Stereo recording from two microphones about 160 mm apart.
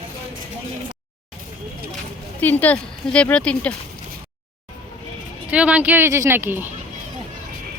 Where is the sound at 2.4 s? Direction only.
10° left (ahead or behind).